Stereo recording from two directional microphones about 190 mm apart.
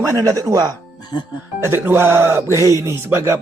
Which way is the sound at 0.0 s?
15° right (ahead or behind).